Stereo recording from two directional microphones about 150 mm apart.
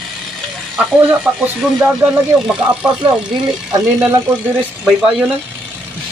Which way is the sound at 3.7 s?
20° right (ahead or behind).